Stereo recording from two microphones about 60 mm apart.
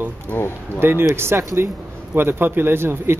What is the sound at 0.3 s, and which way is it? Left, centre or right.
Speech, left.